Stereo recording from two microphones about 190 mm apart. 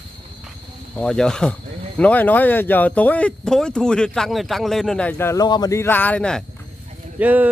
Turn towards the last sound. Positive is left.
turn(degrees=-10)  # may be behind; listen again after turning